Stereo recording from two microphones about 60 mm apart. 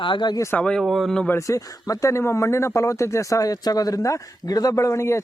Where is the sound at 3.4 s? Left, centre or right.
Left.